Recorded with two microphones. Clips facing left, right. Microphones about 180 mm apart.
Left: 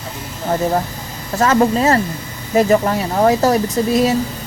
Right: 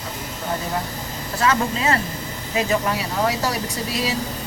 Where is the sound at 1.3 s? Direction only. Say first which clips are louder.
Left 7 dB; 45° left (ahead or behind).